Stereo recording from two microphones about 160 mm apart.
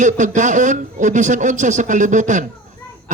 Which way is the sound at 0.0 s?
50° right (ahead or behind).